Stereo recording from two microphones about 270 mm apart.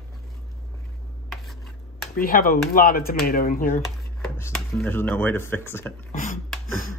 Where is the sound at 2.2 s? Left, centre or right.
Left.